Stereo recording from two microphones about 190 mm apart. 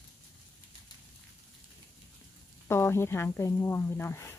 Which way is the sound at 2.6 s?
15° left (ahead or behind).